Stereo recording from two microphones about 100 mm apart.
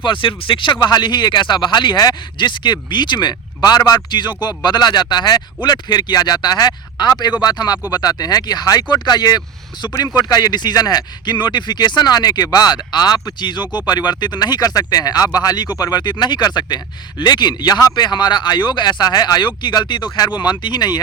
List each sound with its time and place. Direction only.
0.0 s speech: 55° left (ahead or behind)